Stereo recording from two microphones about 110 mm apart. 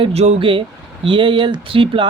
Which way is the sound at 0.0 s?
70° right (ahead or behind).